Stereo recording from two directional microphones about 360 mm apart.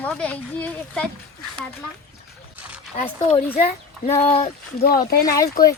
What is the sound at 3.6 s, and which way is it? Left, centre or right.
Speech, centre.